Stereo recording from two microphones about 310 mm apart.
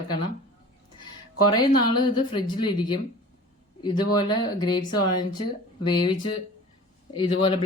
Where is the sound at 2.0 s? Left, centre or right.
Centre.